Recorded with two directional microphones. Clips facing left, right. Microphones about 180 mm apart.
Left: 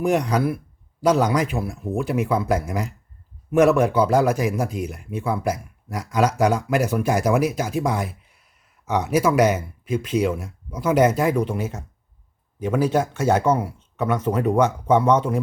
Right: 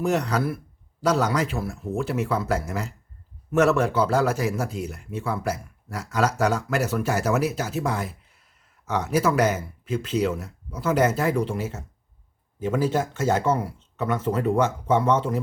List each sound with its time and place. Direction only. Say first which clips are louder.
0.0 s speech: left 3 dB; 15° left (ahead or behind)